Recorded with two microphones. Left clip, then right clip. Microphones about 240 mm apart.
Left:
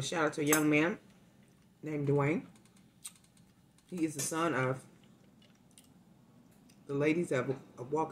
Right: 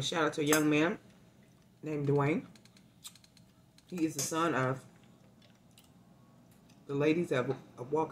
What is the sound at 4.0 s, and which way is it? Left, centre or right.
Speech, centre.